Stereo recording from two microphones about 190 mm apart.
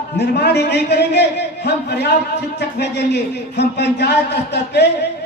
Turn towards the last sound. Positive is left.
turn(degrees=60)  # may be behind; listen again after turning